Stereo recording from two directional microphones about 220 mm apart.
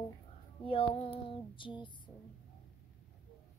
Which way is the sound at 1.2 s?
20° left (ahead or behind).